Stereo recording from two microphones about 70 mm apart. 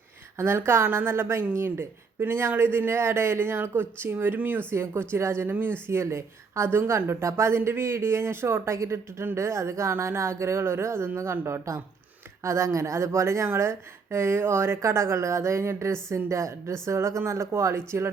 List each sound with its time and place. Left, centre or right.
0.3 s a woman's voice: right